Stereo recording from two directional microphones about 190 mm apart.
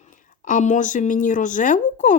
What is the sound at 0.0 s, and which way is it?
A woman's voice, 40° left (ahead or behind).